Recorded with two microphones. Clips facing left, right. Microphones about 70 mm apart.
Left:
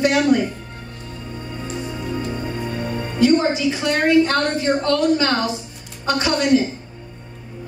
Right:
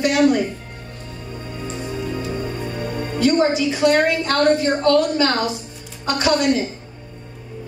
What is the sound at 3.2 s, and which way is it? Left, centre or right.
A woman's voice, left.